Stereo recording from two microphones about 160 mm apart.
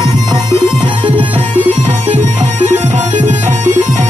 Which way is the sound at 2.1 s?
45° right (ahead or behind).